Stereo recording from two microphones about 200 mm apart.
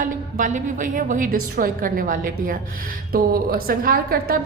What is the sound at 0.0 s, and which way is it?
A woman's voice, 40° right (ahead or behind).